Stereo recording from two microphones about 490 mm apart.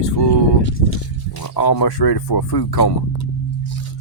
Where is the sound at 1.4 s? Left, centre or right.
Left.